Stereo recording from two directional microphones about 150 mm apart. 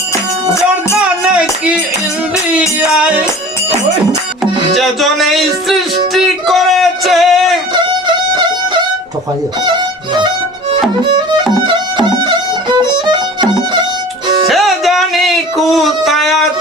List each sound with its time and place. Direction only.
0.9 s music: 5° right (ahead or behind)
4.7 s speech: centre (ahead or behind)
6.1 s a sound: centre (ahead or behind)
7.7 s music: 30° right (ahead or behind)
11.7 s violin: 30° right (ahead or behind)
14.4 s music: centre (ahead or behind)